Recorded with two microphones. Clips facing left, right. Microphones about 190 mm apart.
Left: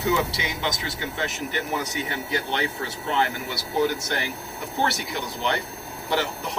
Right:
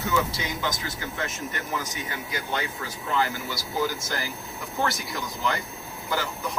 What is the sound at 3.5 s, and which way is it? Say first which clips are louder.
Speech: left 6 dB; 65° left (ahead or behind).